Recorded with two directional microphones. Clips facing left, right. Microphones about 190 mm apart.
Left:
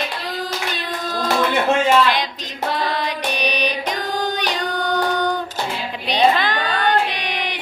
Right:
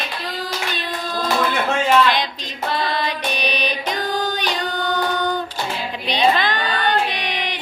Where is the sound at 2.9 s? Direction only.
10° left (ahead or behind).